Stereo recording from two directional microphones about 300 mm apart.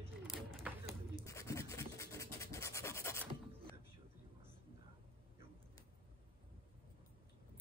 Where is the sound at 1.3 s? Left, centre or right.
Centre.